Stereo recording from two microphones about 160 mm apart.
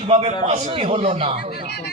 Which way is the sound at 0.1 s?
40° right (ahead or behind).